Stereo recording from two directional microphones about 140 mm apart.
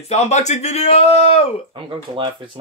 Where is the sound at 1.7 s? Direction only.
40° right (ahead or behind).